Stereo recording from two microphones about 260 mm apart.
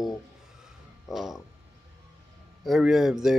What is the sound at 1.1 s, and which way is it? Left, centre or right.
Speech, centre.